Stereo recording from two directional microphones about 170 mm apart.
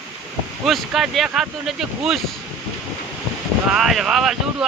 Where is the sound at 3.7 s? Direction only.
Centre (ahead or behind).